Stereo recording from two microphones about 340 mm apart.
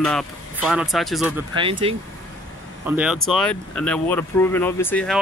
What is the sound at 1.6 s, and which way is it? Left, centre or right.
Speech, centre.